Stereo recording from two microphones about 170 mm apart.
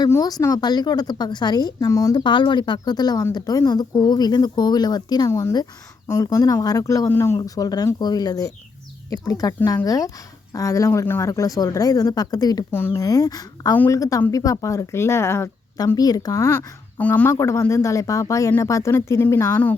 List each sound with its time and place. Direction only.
0.0 s speech: 20° left (ahead or behind)